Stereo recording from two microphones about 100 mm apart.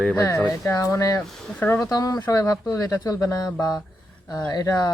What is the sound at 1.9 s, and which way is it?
Speech, 40° left (ahead or behind).